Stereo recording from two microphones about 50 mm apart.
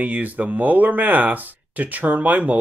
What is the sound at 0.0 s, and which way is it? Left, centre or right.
Speech, right.